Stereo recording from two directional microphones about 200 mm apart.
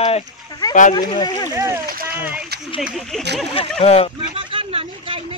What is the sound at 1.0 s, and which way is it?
Speech, 20° left (ahead or behind).